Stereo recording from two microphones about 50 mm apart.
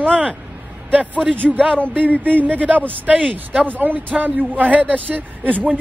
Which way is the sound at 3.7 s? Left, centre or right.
Right.